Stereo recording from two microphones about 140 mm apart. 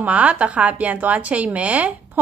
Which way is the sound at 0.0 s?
10° right (ahead or behind).